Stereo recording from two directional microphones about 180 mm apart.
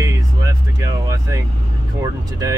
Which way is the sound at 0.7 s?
15° right (ahead or behind).